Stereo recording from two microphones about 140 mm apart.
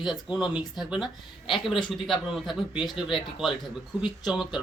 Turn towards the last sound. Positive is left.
turn(degrees=-5)  # may be behind; listen again after turning